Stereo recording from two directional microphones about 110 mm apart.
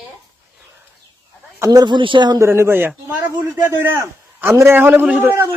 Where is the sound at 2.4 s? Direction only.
25° right (ahead or behind).